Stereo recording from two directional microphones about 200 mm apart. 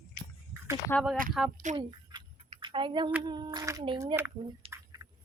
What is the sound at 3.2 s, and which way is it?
Speech, 20° right (ahead or behind).